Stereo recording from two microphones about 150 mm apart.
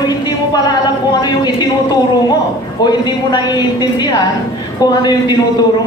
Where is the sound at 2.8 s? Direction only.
30° left (ahead or behind).